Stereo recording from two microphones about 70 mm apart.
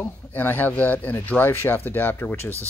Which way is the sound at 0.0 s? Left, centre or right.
Left.